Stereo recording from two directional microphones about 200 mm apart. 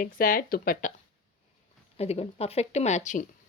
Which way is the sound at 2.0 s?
30° left (ahead or behind).